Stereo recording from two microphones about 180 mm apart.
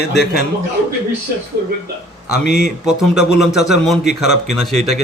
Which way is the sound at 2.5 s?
70° left (ahead or behind).